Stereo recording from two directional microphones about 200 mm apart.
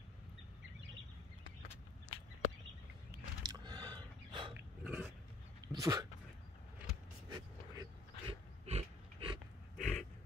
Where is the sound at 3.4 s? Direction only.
20° right (ahead or behind).